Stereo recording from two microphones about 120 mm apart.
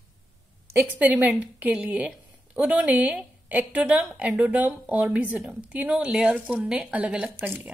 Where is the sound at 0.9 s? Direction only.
15° right (ahead or behind).